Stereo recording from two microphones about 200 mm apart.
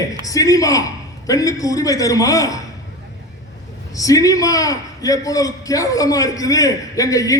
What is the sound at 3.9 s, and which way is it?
A man's voice, 15° left (ahead or behind).